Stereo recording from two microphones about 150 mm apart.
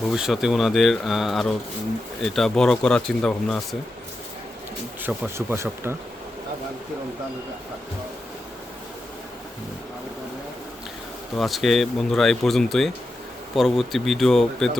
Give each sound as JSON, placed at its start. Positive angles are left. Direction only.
{"t": 0.1, "sound": "speech", "side_deg": -5}
{"t": 5.0, "sound": "speech", "side_deg": -15}
{"t": 11.3, "sound": "speech", "side_deg": 0}